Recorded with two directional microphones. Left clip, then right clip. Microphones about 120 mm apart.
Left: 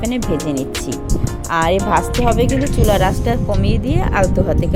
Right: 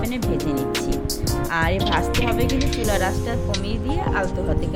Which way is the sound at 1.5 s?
50° left (ahead or behind).